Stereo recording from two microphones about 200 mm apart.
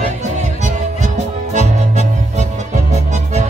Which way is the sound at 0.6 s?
35° right (ahead or behind).